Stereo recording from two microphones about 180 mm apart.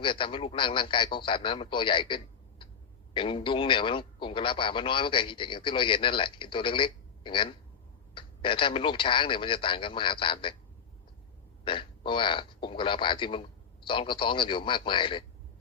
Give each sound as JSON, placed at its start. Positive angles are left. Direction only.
{"t": 0.0, "sound": "a man's voice", "side_deg": 30}
{"t": 11.6, "sound": "a man's voice", "side_deg": 30}